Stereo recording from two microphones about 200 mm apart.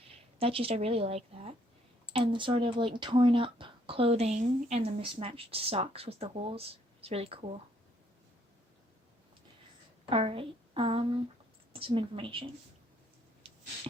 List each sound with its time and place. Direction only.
0.0 s speech: 30° right (ahead or behind)
10.1 s speech: 30° right (ahead or behind)